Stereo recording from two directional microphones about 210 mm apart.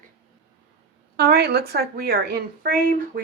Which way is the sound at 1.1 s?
50° right (ahead or behind).